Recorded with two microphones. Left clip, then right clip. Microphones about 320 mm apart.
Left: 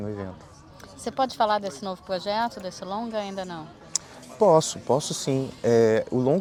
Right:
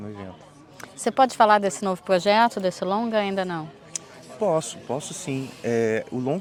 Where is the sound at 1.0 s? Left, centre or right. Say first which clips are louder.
Right 6 dB; right.